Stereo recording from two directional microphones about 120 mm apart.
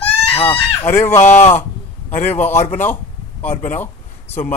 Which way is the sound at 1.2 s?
80° left.